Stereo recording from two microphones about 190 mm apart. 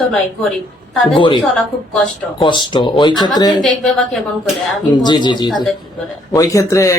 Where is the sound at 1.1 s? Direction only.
25° left (ahead or behind).